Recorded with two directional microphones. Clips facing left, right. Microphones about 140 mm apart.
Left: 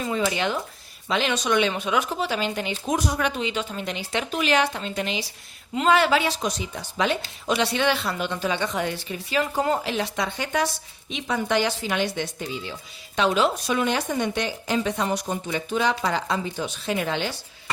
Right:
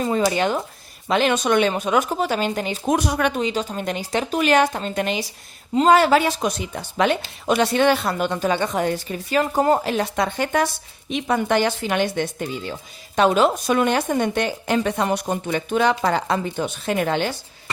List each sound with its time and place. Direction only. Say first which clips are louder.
0.0 s speech: right 5 dB; 40° right (ahead or behind)
2.9 s speech: right 4 dB; 65° right (ahead or behind)
3.4 s speech: right 4 dB; 40° right (ahead or behind)
5.7 s speech: right 5 dB; 40° right (ahead or behind)